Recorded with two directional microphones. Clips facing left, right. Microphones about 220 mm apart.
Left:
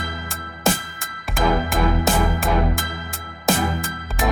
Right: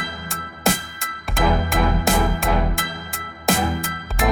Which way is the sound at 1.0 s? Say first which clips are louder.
Right 1 dB; centre (ahead or behind).